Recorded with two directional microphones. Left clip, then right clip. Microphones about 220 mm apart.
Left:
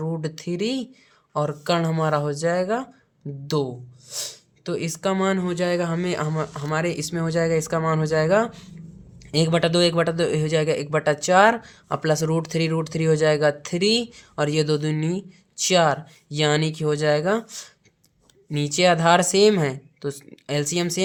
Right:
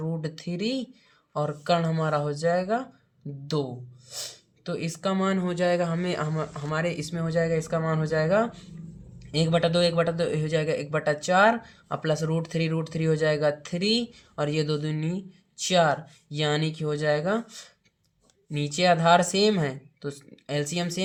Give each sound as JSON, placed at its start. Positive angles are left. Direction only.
{"t": 0.0, "sound": "a man's voice", "side_deg": 30}